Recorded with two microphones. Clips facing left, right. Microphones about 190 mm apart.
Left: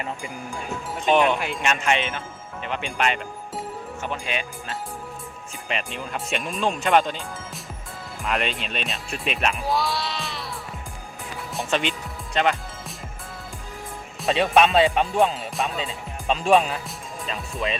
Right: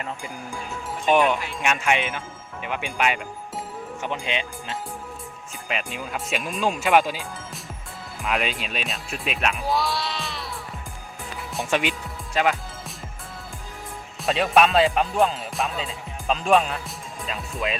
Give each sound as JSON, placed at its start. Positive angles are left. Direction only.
{"t": 1.0, "sound": "speech", "side_deg": -10}
{"t": 4.0, "sound": "speech", "side_deg": -20}
{"t": 5.6, "sound": "speech", "side_deg": -5}
{"t": 11.7, "sound": "speech", "side_deg": -10}
{"t": 14.2, "sound": "speech", "side_deg": 0}